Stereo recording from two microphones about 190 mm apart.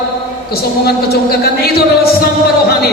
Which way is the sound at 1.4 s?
55° left (ahead or behind).